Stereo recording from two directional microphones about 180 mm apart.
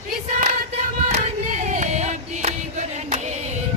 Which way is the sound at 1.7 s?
40° right (ahead or behind).